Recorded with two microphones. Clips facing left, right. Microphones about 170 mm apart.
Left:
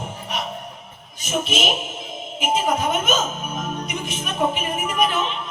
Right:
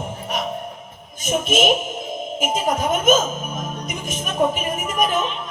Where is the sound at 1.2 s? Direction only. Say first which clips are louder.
Right 4 dB; 45° right (ahead or behind).